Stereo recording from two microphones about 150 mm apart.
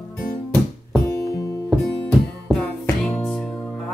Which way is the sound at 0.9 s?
20° left (ahead or behind).